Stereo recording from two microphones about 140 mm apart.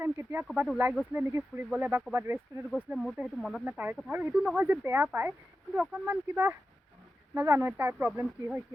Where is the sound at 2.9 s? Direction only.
5° right (ahead or behind).